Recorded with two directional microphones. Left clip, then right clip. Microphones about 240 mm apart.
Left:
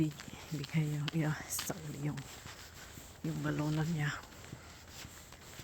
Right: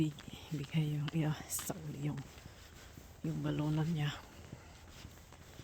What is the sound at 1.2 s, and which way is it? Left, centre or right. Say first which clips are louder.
Speech: left 2 dB; centre.